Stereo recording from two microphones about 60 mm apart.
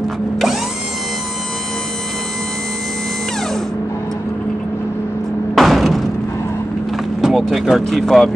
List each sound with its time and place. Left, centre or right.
5.5 s a sound: centre
7.2 s vehicle: centre
7.5 s speech: centre
7.8 s speech: centre